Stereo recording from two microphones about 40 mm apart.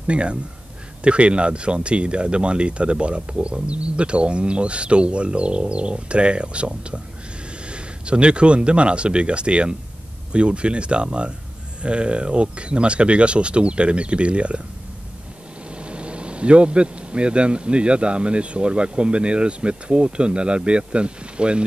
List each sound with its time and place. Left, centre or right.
0.0 s speech: right
15.7 s speech: right